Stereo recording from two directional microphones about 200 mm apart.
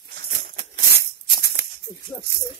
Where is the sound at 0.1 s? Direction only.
50° right (ahead or behind).